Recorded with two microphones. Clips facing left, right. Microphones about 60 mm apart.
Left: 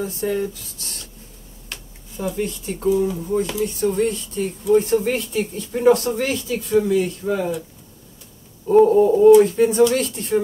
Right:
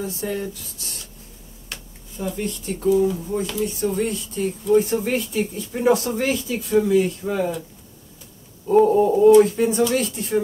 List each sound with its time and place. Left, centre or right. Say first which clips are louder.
0.0 s speech: left 4 dB; centre
8.6 s a sound: left 2 dB; centre
8.9 s speech: left 1 dB; centre